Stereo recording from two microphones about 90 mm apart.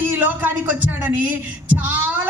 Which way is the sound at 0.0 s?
20° right (ahead or behind).